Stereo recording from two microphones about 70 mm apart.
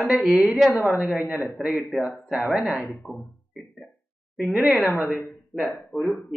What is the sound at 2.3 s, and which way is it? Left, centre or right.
Speech, centre.